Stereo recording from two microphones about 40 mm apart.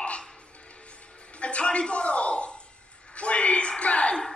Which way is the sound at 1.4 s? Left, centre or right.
Left.